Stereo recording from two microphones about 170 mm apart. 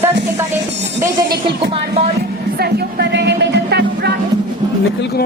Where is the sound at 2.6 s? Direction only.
80° right.